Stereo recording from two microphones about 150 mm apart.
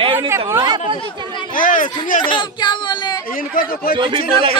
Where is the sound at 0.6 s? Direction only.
35° right (ahead or behind).